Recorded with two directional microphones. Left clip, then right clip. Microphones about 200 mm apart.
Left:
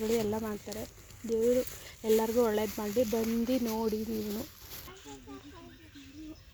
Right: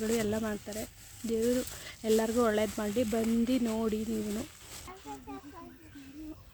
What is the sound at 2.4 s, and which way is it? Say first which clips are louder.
Speech: right 1 dB; 10° right (ahead or behind).